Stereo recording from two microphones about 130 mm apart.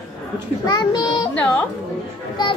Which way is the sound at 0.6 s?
35° left (ahead or behind).